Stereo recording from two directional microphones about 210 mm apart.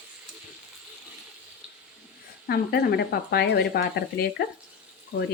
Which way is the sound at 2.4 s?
50° left (ahead or behind).